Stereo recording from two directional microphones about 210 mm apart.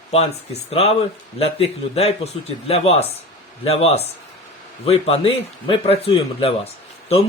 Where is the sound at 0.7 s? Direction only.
30° left (ahead or behind).